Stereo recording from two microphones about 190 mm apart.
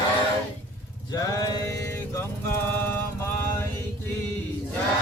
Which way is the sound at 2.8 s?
10° left (ahead or behind).